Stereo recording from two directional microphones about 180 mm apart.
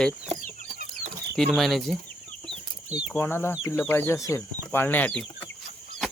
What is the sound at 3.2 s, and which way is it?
Speech, 15° left (ahead or behind).